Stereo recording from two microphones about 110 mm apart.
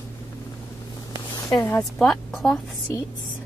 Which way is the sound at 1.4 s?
35° left (ahead or behind).